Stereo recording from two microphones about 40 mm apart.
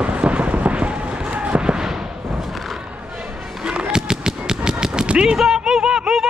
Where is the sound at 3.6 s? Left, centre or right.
Right.